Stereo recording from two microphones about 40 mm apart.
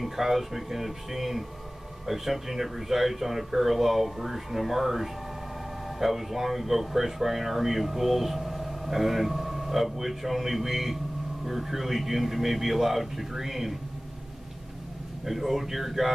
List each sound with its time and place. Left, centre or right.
0.0 s speech: centre
15.2 s speech: centre